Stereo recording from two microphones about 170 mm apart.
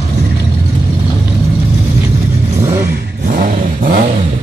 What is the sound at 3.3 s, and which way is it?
Vehicle, 55° right (ahead or behind).